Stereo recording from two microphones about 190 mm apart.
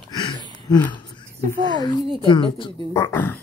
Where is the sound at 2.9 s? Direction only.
15° left (ahead or behind).